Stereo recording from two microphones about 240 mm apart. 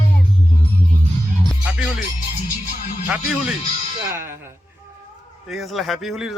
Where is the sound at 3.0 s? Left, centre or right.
Centre.